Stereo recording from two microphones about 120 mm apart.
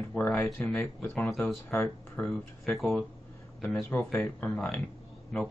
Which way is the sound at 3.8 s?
15° left (ahead or behind).